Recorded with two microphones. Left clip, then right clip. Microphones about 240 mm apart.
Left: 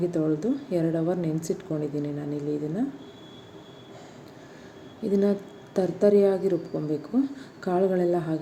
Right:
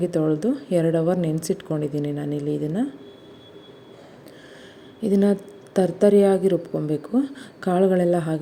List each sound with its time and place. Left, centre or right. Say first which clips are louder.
0.1 s a woman's voice: right 4 dB; right
5.0 s a woman's voice: right 4 dB; right